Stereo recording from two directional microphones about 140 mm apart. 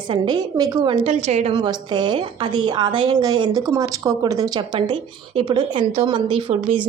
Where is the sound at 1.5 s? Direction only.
30° right (ahead or behind).